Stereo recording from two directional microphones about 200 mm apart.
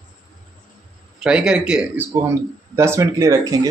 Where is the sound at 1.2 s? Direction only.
5° right (ahead or behind).